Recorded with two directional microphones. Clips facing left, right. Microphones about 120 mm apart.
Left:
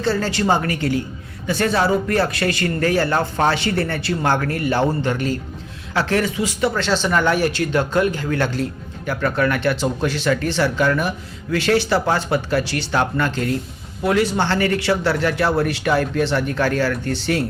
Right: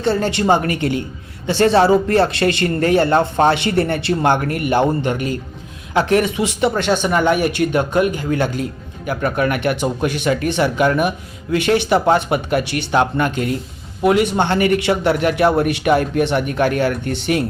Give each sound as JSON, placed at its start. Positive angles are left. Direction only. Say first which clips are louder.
{"t": 0.0, "sound": "speech", "louder": "right 3 dB", "side_deg": -20}